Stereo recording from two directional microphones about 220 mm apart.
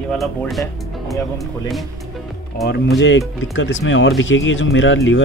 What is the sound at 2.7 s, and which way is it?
Speech, 45° left (ahead or behind).